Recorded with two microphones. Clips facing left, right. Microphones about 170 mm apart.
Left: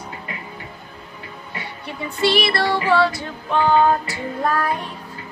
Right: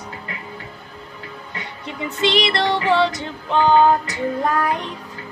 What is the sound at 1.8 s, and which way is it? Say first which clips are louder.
Music: left 1 dB; 20° right (ahead or behind).